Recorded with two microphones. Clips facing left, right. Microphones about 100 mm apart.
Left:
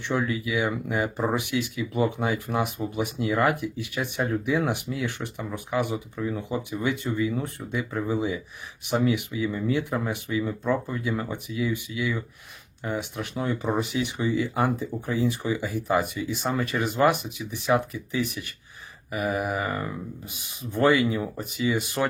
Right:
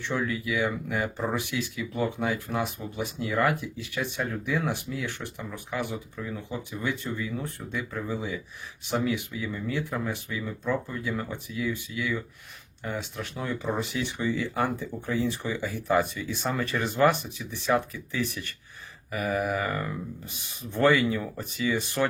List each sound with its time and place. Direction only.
0.0 s speech: 20° left (ahead or behind)
3.8 s speech: 55° left (ahead or behind)
5.0 s speech: 15° left (ahead or behind)
21.2 s speech: 25° left (ahead or behind)
21.7 s speech: 15° left (ahead or behind)